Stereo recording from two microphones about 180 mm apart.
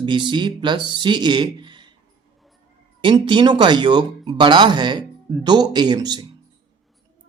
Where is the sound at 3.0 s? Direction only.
25° right (ahead or behind).